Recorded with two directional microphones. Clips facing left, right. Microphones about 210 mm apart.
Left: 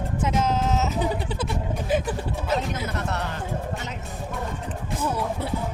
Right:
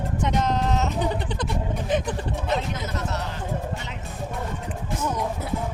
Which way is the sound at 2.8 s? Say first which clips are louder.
Left 1 dB; 55° left (ahead or behind).